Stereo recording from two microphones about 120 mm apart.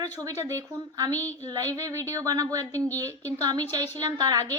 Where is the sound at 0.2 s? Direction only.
25° right (ahead or behind).